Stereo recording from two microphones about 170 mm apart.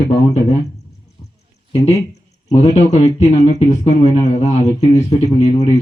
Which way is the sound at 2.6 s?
45° left (ahead or behind).